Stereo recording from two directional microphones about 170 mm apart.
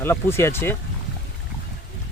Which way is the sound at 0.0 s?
15° left (ahead or behind).